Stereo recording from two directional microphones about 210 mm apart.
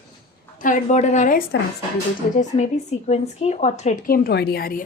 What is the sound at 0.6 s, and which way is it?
A woman's voice, 40° left (ahead or behind).